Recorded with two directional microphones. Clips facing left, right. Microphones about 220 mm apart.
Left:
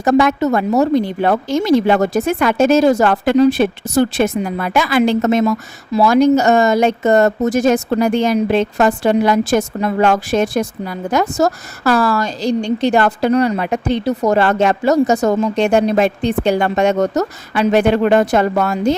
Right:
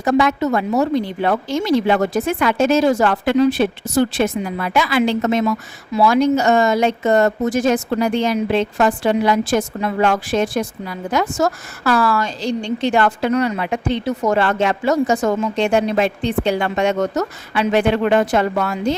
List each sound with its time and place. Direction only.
0.0 s a woman's voice: 45° left (ahead or behind)